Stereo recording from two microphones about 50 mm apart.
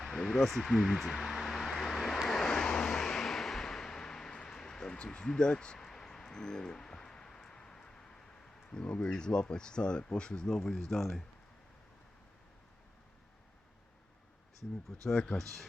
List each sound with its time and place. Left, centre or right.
0.0 s a sound: centre
2.2 s vehicle: centre
8.7 s speech: centre
15.0 s speech: centre
15.4 s speech: centre